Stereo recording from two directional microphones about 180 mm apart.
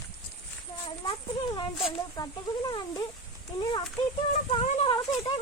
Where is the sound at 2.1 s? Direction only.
20° left (ahead or behind).